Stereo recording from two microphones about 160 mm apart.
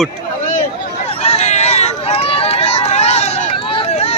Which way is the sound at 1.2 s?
40° left (ahead or behind).